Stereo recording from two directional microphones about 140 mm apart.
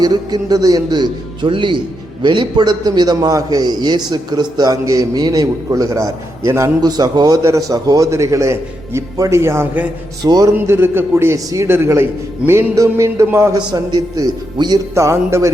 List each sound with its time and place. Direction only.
0.0 s a man's voice: 30° right (ahead or behind)
10.2 s a man's voice: 30° right (ahead or behind)
10.5 s a man's voice: 15° right (ahead or behind)